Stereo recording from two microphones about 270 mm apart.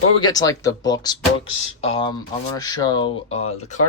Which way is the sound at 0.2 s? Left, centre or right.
Centre.